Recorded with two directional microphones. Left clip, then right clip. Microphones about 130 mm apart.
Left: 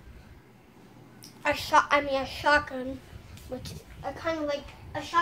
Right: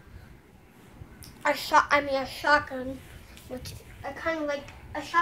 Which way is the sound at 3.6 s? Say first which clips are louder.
Left 1 dB; 10° right (ahead or behind).